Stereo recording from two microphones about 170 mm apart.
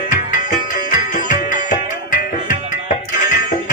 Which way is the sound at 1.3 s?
50° left (ahead or behind).